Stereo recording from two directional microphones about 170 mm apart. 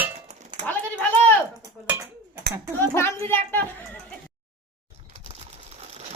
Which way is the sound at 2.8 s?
15° left (ahead or behind).